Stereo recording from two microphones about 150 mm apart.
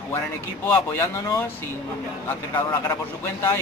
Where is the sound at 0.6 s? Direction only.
15° left (ahead or behind).